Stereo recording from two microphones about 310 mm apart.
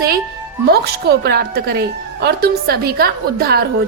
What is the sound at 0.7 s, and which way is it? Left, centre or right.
A woman's voice, right.